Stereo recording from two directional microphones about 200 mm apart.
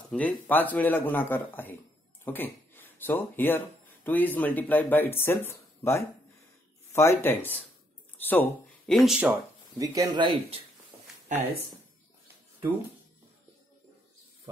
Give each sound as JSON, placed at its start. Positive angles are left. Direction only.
{"t": 0.1, "sound": "speech", "side_deg": 10}
{"t": 11.3, "sound": "speech", "side_deg": -40}